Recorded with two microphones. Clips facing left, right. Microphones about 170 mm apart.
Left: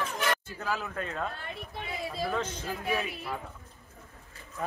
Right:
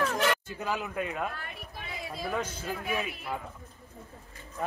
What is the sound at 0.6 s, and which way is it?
Speech, 15° right (ahead or behind).